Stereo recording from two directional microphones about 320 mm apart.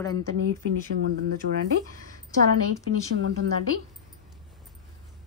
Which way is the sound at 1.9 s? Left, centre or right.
Right.